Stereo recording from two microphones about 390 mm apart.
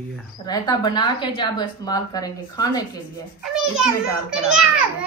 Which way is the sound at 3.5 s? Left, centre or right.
Centre.